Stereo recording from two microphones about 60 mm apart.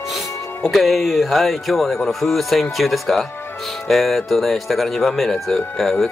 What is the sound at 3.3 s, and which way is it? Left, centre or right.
Music, left.